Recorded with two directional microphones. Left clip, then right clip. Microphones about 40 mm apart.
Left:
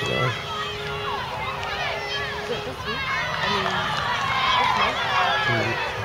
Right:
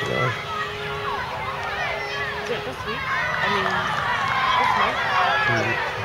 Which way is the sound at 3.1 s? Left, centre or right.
Left.